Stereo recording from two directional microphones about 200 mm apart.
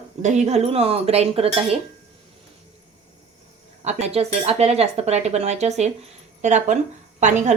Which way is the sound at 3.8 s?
35° right (ahead or behind).